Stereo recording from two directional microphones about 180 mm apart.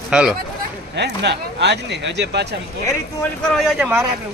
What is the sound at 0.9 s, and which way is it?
Speech, 70° right (ahead or behind).